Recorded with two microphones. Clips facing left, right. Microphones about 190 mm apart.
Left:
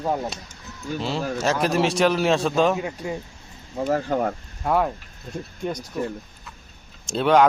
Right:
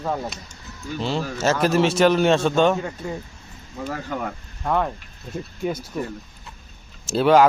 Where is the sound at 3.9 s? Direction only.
40° left (ahead or behind).